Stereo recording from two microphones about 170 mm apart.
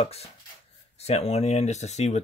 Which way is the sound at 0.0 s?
35° left (ahead or behind).